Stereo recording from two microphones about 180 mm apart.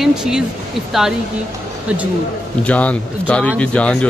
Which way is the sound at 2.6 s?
5° left (ahead or behind).